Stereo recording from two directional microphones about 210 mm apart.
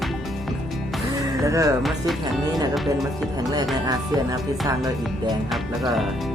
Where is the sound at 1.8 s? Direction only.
Centre (ahead or behind).